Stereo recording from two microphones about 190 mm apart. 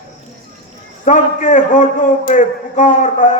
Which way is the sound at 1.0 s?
40° left (ahead or behind).